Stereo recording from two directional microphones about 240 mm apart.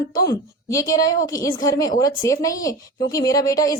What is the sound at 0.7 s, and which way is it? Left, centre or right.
A woman's voice, centre.